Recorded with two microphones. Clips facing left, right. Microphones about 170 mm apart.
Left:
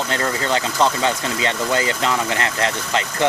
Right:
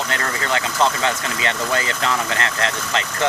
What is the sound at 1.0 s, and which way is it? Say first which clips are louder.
Speech: left 2 dB; 25° left (ahead or behind).